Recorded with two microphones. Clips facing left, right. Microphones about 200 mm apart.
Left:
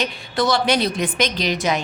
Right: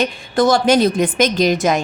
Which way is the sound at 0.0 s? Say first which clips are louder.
Right 6 dB; 50° right (ahead or behind).